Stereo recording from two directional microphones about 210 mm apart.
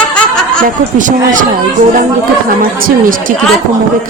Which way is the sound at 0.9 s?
40° right (ahead or behind).